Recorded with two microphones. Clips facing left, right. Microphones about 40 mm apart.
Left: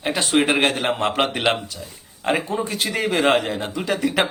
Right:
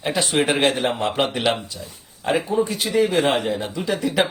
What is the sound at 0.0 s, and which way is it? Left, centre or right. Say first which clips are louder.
Speech: left 1 dB; left.